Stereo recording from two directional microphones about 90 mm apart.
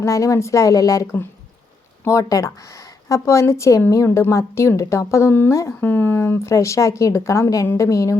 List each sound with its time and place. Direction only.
0.0 s speech: 35° left (ahead or behind)
2.0 s speech: 35° left (ahead or behind)